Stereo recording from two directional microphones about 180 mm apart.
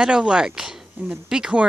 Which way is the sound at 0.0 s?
5° right (ahead or behind).